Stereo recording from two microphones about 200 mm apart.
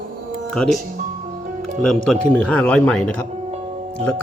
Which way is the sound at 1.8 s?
5° left (ahead or behind).